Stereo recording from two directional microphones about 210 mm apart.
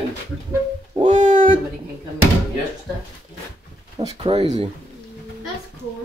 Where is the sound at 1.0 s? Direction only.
30° right (ahead or behind).